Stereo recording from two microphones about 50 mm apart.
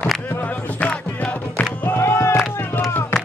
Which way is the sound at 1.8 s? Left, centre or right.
Left.